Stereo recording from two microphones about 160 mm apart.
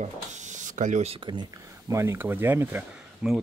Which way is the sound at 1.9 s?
15° right (ahead or behind).